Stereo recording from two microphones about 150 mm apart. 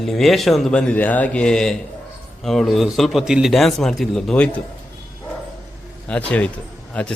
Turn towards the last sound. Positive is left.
turn(degrees=10)  # may be behind; listen again after turning